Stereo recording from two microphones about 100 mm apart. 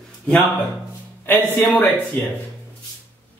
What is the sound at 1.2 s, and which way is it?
Speech, 20° left (ahead or behind).